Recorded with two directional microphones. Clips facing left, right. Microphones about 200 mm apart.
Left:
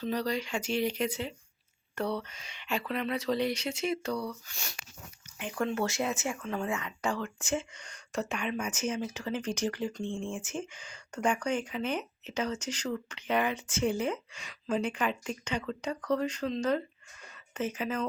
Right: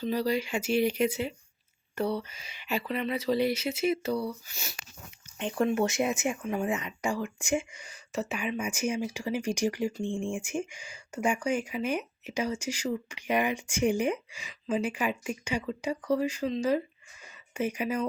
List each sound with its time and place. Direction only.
0.0 s speech: 5° right (ahead or behind)
5.4 s speech: 30° right (ahead or behind); by 18.0 s 15° right (ahead or behind)